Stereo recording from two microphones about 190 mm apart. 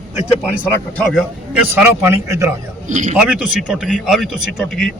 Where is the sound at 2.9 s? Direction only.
40° right (ahead or behind).